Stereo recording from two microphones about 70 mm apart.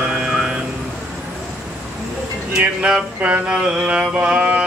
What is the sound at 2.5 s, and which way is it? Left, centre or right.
Speech, centre.